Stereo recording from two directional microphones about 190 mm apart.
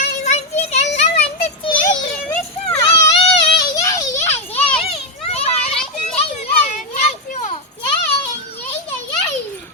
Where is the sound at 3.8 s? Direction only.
15° left (ahead or behind).